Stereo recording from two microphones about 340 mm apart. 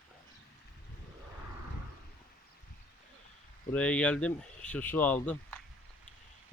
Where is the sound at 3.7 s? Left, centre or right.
Centre.